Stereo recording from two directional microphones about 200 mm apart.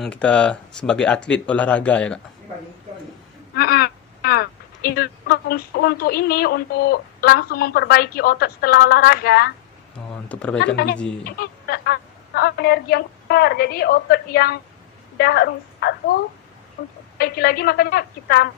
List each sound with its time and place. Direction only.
0.0 s speech: 5° left (ahead or behind)
3.5 s speech: 50° left (ahead or behind)
10.2 s speech: 5° left (ahead or behind)
11.2 s a woman's voice: 50° left (ahead or behind)